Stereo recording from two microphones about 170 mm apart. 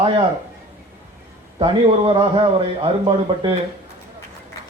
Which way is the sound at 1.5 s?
30° right (ahead or behind).